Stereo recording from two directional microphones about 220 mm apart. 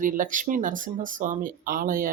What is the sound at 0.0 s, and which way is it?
Speech, 35° right (ahead or behind).